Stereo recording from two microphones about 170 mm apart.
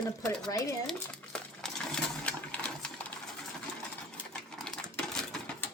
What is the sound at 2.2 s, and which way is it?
Sewing machine, 10° left (ahead or behind).